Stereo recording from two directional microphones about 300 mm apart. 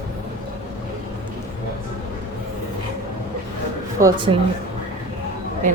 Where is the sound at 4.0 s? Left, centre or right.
Centre.